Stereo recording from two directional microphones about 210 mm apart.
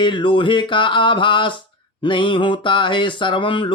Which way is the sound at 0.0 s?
25° left (ahead or behind).